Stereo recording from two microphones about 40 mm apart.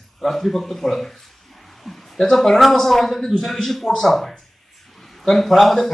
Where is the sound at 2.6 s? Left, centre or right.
Centre.